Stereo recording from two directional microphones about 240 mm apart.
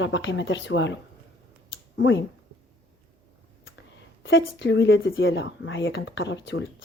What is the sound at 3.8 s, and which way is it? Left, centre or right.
Speech, left.